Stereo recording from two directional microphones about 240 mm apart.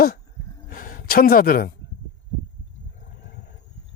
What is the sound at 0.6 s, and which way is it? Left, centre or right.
A woman's voice, left.